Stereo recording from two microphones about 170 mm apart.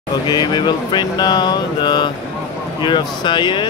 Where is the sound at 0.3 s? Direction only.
25° left (ahead or behind).